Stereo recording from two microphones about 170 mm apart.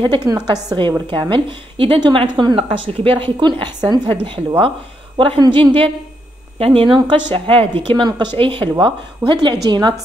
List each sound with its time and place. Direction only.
0.0 s a woman's voice: 25° right (ahead or behind)